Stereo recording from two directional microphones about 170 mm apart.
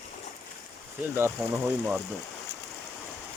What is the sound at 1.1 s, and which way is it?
Speech, 15° right (ahead or behind).